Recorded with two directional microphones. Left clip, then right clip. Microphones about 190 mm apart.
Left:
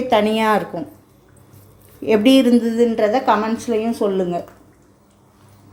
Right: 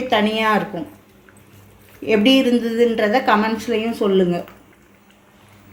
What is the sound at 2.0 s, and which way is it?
Speech, 20° left (ahead or behind).